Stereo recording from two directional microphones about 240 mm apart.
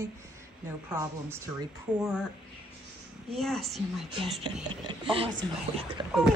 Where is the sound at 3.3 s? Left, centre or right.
Centre.